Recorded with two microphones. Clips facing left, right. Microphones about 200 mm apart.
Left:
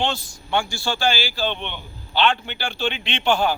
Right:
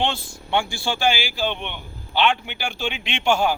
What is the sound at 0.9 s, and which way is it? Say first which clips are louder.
A man's voice: right 1 dB; 15° right (ahead or behind).